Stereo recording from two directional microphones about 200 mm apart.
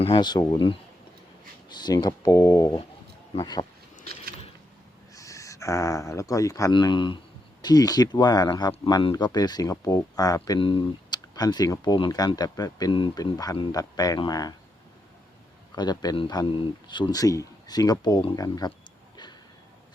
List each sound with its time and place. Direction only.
0.0 s speech: 25° left (ahead or behind)
4.0 s a sound: 50° right (ahead or behind)
5.1 s speech: 15° left (ahead or behind)
15.7 s speech: 20° left (ahead or behind)